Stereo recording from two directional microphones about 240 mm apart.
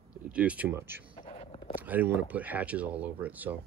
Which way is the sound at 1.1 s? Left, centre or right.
Left.